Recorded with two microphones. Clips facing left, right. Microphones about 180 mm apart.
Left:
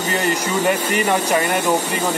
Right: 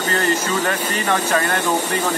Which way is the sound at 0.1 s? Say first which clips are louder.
Even; 15° left (ahead or behind).